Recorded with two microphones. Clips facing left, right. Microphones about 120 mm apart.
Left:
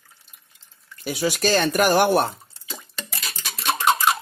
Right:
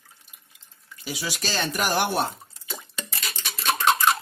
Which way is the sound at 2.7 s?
Centre (ahead or behind).